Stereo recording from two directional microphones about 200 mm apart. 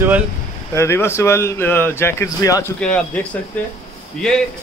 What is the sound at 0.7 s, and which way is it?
A man's voice, 15° left (ahead or behind).